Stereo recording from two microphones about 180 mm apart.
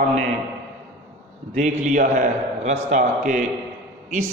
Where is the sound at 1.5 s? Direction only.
40° right (ahead or behind).